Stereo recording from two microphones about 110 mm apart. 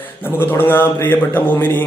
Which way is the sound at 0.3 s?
20° left (ahead or behind).